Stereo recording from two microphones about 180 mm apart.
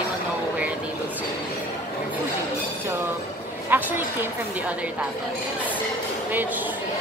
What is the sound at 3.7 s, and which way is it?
Speech, 10° right (ahead or behind).